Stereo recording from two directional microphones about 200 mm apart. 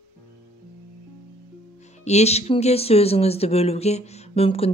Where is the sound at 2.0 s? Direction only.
35° left (ahead or behind).